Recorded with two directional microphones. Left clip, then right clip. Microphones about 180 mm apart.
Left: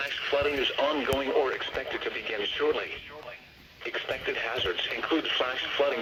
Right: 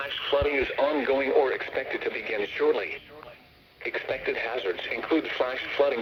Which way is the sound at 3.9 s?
45° right (ahead or behind).